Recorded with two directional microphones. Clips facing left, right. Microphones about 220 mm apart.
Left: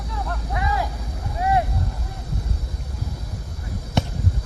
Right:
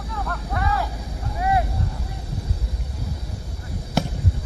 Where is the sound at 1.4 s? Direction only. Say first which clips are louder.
Left 1 dB; 30° left (ahead or behind).